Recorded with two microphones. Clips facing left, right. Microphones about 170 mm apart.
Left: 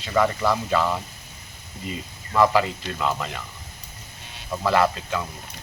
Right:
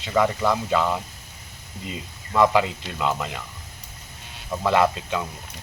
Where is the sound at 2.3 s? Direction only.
20° right (ahead or behind).